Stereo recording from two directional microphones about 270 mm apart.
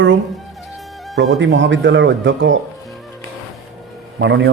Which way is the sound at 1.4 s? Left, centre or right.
Right.